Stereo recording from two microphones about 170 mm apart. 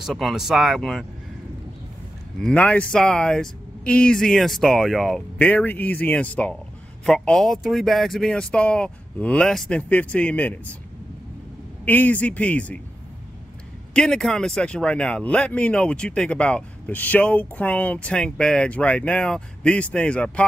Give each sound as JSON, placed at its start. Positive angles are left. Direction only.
{"t": 0.0, "sound": "speech", "side_deg": 0}
{"t": 2.4, "sound": "speech", "side_deg": 5}
{"t": 11.8, "sound": "speech", "side_deg": 10}
{"t": 13.9, "sound": "speech", "side_deg": 5}